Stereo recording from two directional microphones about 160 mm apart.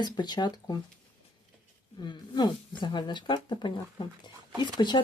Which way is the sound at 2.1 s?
30° left (ahead or behind).